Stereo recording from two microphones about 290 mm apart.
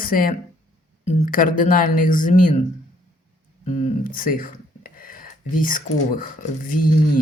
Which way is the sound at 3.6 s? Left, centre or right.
Left.